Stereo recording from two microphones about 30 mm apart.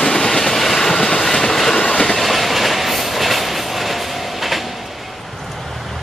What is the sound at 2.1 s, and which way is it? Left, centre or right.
Train, centre.